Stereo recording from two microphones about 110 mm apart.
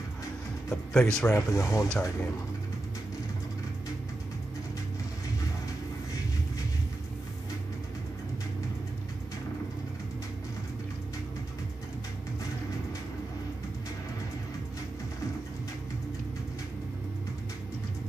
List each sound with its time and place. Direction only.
0.7 s speech: 5° left (ahead or behind)
1.3 s speech: 25° left (ahead or behind)